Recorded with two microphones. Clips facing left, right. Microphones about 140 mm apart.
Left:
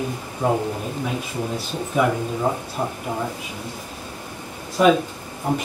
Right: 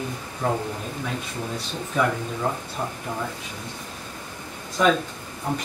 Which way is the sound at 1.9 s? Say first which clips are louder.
Left 3 dB; 10° left (ahead or behind).